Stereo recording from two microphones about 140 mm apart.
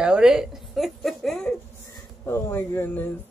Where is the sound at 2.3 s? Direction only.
15° left (ahead or behind).